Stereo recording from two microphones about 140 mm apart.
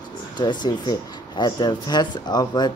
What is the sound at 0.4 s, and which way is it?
Speech, 30° left (ahead or behind).